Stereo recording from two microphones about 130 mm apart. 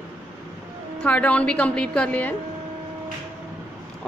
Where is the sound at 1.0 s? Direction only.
10° left (ahead or behind).